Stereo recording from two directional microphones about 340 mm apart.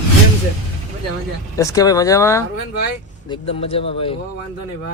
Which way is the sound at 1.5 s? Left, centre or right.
Centre.